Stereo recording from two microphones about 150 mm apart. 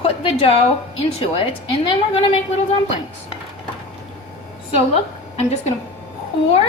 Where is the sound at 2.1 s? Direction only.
40° left (ahead or behind).